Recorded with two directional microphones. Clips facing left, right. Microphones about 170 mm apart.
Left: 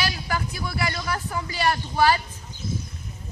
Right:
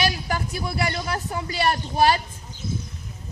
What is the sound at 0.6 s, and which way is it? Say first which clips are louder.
Speech: right 2 dB; 30° right (ahead or behind).